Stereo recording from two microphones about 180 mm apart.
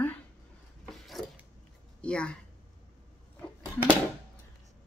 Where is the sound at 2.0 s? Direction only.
5° left (ahead or behind).